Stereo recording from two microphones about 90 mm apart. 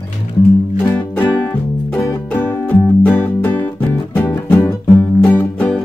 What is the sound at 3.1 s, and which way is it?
Music, 20° left (ahead or behind).